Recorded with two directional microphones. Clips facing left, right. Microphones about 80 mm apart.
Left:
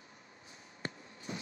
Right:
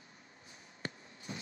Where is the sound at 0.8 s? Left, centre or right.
Left.